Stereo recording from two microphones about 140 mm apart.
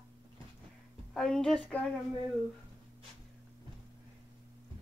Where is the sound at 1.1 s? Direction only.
5° left (ahead or behind).